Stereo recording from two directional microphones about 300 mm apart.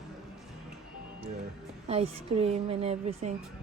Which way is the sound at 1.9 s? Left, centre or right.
Centre.